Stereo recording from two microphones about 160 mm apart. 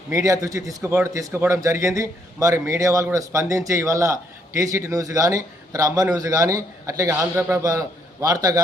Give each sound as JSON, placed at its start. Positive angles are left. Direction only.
{"t": 0.1, "sound": "a man's voice", "side_deg": -20}